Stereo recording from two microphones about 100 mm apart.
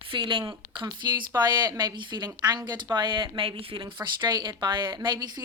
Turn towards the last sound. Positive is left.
turn(degrees=-40)  # may be behind; listen again after turning